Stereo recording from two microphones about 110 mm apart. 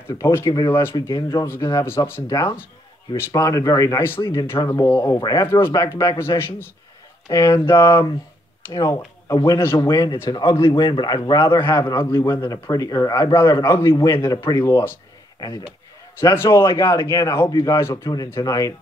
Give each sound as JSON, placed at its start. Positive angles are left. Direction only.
{"t": 0.1, "sound": "speech", "side_deg": 30}
{"t": 2.2, "sound": "speech", "side_deg": 35}
{"t": 3.2, "sound": "speech", "side_deg": 25}
{"t": 4.0, "sound": "a man's voice", "side_deg": 25}
{"t": 12.1, "sound": "speech", "side_deg": 25}
{"t": 16.2, "sound": "speech", "side_deg": 25}